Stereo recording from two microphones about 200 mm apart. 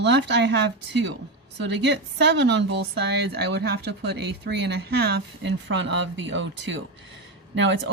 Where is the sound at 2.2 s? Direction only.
60° right (ahead or behind).